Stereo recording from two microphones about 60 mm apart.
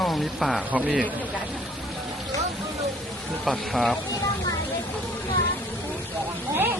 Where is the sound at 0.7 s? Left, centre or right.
Right.